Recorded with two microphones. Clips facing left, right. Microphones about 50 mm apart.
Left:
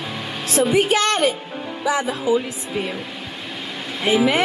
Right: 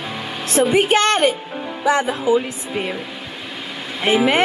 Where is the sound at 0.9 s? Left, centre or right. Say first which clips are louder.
Right 3 dB; centre.